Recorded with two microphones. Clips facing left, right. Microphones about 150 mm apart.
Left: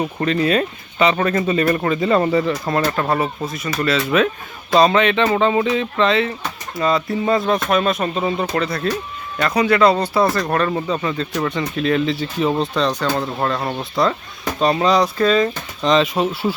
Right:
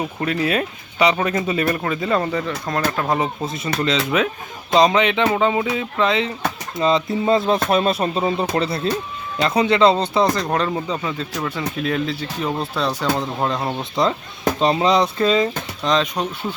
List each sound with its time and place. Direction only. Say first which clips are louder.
0.0 s speech: left 3 dB; 5° right (ahead or behind)
3.1 s speech: left 1 dB; 20° right (ahead or behind)
11.0 s speech: left 4 dB; 5° right (ahead or behind)
12.7 s speech: left 2 dB; 10° right (ahead or behind)
13.6 s speech: even; centre (ahead or behind)
14.6 s speech: left 2 dB; 25° right (ahead or behind)
15.8 s speech: left 4 dB; centre (ahead or behind)